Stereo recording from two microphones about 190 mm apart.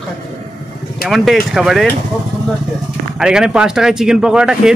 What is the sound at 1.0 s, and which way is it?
Speech, centre (ahead or behind).